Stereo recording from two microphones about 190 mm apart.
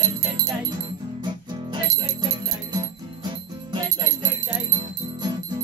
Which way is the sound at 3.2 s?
25° right (ahead or behind).